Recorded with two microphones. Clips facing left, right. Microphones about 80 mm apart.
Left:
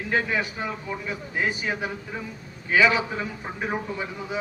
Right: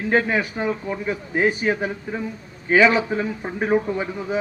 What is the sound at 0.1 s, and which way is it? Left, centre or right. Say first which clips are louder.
A man's voice: right 5 dB; right.